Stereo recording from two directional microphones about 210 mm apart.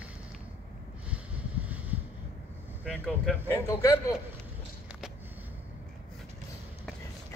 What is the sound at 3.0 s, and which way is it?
Speech, 5° left (ahead or behind).